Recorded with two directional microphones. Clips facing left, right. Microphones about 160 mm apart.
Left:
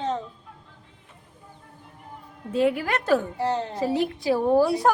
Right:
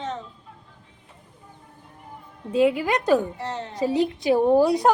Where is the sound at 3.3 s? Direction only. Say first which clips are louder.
Left 6 dB; 35° left (ahead or behind).